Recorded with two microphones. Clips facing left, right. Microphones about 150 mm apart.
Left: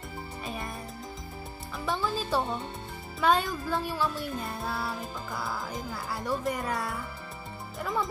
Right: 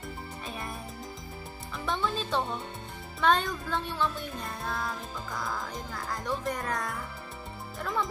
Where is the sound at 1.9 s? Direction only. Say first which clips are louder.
Left 1 dB; 5° left (ahead or behind).